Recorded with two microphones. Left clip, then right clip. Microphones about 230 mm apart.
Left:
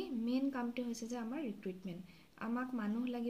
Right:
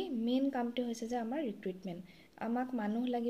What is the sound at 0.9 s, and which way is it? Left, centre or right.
Speech, centre.